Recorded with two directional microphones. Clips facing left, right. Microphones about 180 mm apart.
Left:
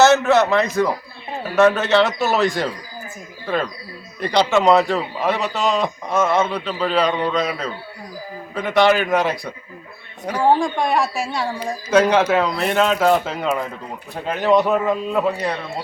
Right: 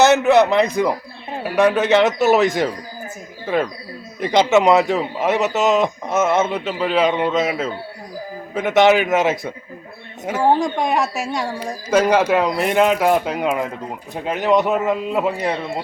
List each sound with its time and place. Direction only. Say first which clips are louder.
0.0 s a man's voice: right 1 dB; 15° right (ahead or behind)
10.2 s speech: even; 5° right (ahead or behind)
10.6 s a man's voice: even; 15° right (ahead or behind)